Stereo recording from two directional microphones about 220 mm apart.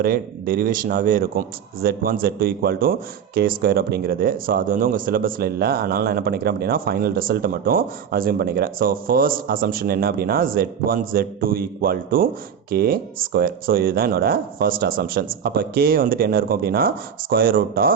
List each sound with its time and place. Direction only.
0.0 s a man's voice: 40° right (ahead or behind)